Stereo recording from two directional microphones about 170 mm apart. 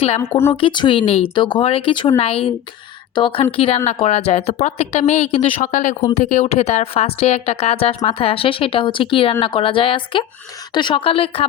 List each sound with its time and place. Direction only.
0.5 s speech: 30° left (ahead or behind)